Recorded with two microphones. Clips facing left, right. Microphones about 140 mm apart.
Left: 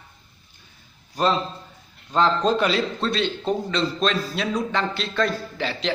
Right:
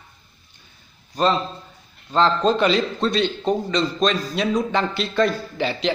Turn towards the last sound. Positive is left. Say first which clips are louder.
# right 4 dB
turn(degrees=0)  # may be behind; listen again after turning